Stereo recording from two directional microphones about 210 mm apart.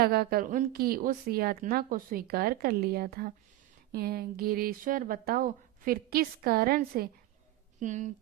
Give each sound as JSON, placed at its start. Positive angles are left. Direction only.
{"t": 0.0, "sound": "a woman's voice", "side_deg": -45}